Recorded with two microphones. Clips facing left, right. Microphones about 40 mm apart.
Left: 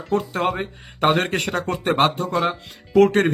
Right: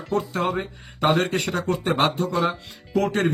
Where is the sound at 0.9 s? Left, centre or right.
Left.